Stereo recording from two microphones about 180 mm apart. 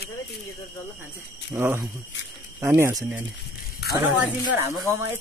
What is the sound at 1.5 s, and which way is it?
Speech, 15° right (ahead or behind).